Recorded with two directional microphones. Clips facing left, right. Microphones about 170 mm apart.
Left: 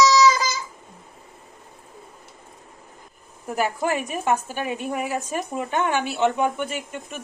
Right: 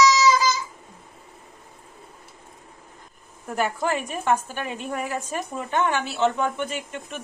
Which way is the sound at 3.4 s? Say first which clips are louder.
Left 1 dB; 10° left (ahead or behind).